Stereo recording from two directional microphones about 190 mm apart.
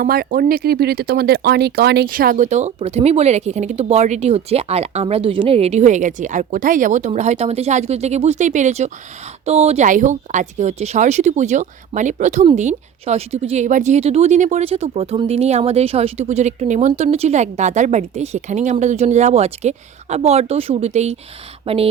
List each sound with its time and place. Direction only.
0.0 s speech: 50° right (ahead or behind); by 21.8 s 30° right (ahead or behind)